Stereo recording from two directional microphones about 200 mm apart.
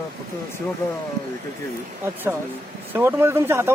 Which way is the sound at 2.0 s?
10° right (ahead or behind).